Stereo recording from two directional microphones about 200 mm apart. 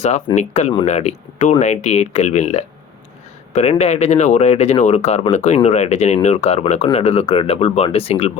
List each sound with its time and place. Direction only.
0.3 s speech: 35° left (ahead or behind)